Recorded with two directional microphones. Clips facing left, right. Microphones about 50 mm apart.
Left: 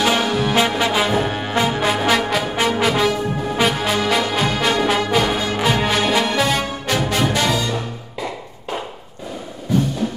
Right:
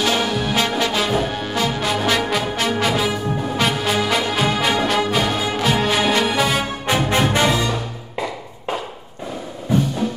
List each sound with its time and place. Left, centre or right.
0.0 s music: centre
2.1 s brass instrument: centre
2.5 s music: centre
6.9 s music: right